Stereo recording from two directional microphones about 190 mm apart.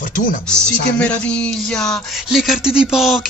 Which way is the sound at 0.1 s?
45° left (ahead or behind).